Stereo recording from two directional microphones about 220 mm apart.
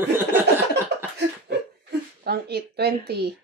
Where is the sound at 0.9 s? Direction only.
50° right (ahead or behind).